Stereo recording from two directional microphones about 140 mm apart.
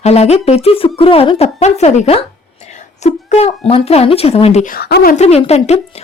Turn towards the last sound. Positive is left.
turn(degrees=50)  # may be behind; listen again after turning